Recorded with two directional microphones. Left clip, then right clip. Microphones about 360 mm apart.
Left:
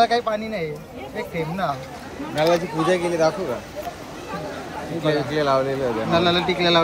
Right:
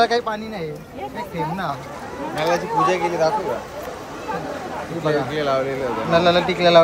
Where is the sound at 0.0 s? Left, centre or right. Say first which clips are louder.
Even; centre.